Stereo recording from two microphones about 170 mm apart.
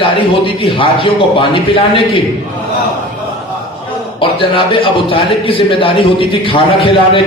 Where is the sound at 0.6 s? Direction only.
30° left (ahead or behind).